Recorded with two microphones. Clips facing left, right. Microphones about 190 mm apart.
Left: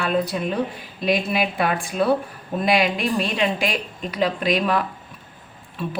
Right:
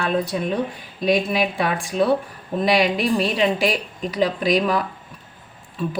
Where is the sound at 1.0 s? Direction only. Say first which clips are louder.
Right 2 dB; centre (ahead or behind).